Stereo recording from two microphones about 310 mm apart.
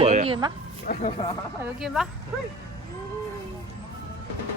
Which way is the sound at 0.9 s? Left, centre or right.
Left.